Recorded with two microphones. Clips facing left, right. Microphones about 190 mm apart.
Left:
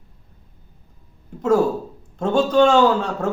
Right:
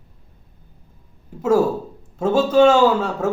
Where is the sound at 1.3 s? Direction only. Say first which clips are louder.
Even; 5° right (ahead or behind).